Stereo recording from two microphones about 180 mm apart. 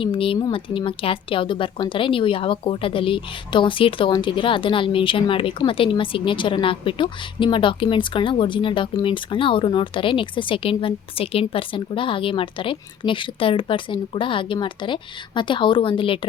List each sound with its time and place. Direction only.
0.0 s speech: 30° left (ahead or behind)